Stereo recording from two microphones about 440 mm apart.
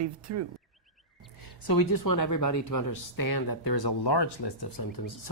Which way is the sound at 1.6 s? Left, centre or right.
Left.